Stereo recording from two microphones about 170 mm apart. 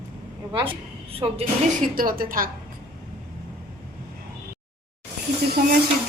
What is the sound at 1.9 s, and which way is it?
Speech, 55° right (ahead or behind).